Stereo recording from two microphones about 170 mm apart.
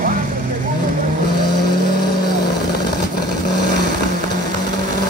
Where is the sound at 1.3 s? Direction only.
25° left (ahead or behind).